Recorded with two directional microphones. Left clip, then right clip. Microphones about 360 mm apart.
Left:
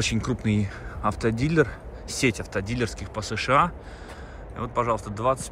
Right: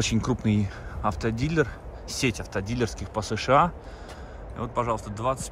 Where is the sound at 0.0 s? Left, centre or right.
Centre.